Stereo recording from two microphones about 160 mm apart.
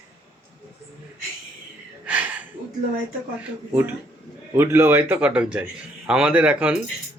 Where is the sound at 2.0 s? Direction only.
10° right (ahead or behind).